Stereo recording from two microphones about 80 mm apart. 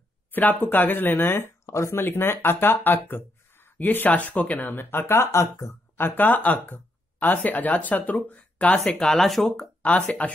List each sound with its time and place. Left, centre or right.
0.3 s speech: left
8.9 s speech: centre
9.8 s speech: centre